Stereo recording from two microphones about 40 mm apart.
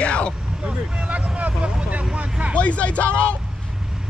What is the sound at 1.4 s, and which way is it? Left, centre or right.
Vehicle, right.